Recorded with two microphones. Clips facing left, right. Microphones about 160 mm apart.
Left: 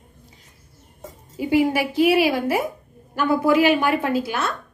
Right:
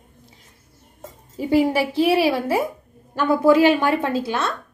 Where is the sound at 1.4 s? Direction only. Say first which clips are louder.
Right 1 dB; 35° right (ahead or behind).